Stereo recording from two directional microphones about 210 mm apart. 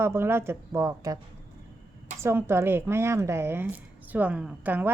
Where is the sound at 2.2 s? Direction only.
10° right (ahead or behind).